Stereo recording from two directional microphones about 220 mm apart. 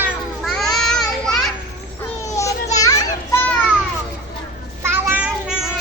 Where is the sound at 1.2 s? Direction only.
Centre (ahead or behind).